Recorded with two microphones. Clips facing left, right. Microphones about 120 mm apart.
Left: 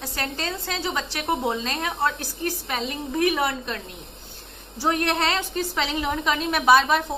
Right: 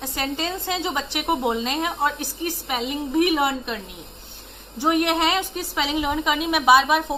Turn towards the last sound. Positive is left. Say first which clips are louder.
# right 1 dB
turn(degrees=-10)  # may be behind; listen again after turning